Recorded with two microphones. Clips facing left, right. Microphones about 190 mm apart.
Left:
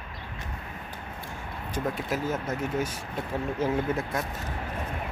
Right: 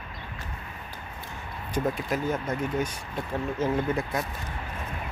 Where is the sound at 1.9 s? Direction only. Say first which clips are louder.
Right 1 dB; 5° left (ahead or behind).